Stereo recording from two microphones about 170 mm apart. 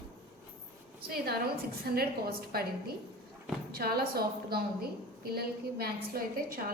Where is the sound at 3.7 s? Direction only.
65° right (ahead or behind).